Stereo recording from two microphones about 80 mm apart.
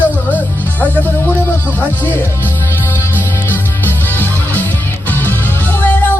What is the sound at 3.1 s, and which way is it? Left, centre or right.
Music, left.